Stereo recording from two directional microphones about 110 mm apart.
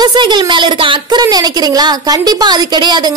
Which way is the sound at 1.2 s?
35° right (ahead or behind).